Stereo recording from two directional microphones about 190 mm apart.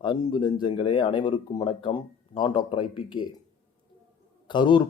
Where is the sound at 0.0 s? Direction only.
25° left (ahead or behind).